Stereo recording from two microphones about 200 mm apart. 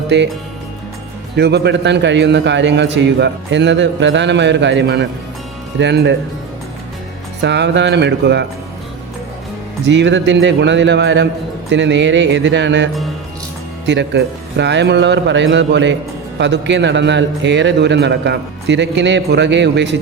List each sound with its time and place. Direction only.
0.1 s a man's voice: 60° right (ahead or behind)
1.4 s a man's voice: 55° right (ahead or behind)
7.4 s a man's voice: 60° right (ahead or behind)
9.8 s a man's voice: 60° right (ahead or behind)